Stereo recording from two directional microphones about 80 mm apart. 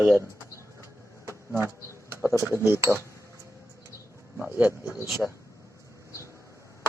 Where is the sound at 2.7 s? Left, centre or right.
Right.